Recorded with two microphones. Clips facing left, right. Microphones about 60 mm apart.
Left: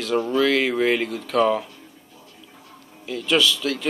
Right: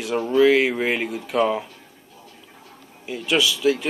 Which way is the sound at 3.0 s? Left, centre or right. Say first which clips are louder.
Left 1 dB; centre.